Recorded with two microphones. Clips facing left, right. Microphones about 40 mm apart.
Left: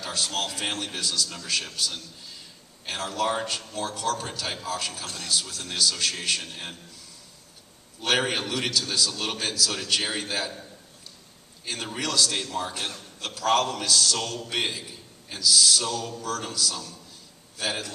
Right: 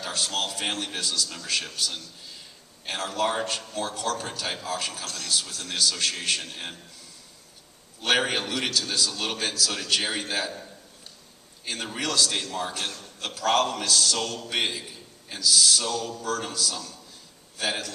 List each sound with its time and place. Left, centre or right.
0.1 s a man's voice: centre
2.8 s a man's voice: centre
5.0 s speech: left
5.3 s a man's voice: centre
8.0 s a man's voice: centre
11.6 s a man's voice: centre
12.7 s speech: centre
13.4 s a man's voice: centre
16.3 s a man's voice: centre